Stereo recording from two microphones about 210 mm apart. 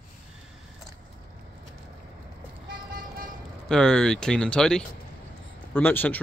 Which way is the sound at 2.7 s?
45° right (ahead or behind).